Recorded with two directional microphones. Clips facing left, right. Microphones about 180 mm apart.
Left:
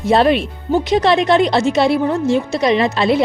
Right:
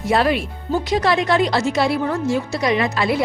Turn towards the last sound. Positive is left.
turn(degrees=25)  # may be behind; listen again after turning